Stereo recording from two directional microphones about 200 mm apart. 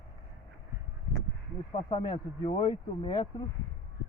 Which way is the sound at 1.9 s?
25° left (ahead or behind).